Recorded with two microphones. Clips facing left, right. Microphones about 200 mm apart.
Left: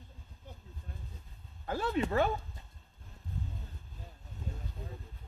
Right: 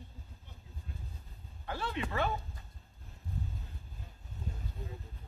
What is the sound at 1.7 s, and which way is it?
Speech, 45° left (ahead or behind).